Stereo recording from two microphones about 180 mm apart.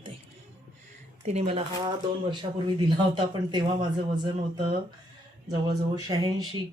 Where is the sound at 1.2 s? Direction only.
35° right (ahead or behind).